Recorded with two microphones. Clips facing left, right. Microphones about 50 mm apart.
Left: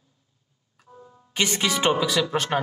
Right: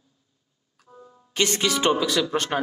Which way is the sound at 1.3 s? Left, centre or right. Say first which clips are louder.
Right 1 dB; centre.